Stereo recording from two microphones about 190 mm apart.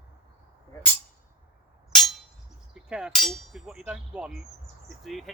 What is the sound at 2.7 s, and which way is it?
Speech, 5° right (ahead or behind).